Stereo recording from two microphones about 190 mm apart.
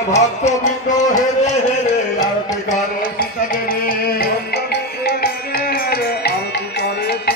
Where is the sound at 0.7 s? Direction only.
40° left (ahead or behind).